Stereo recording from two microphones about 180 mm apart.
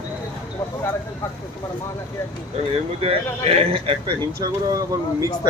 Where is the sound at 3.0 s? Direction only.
35° right (ahead or behind).